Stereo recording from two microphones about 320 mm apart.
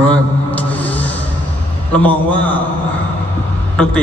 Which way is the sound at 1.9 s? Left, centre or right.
Centre.